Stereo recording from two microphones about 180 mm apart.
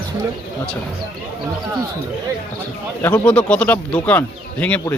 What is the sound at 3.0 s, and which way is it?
Speech, 10° left (ahead or behind).